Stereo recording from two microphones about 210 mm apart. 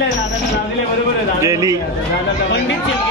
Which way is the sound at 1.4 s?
15° right (ahead or behind).